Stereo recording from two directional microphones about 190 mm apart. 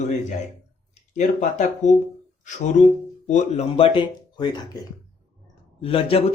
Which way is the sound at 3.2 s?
35° left (ahead or behind).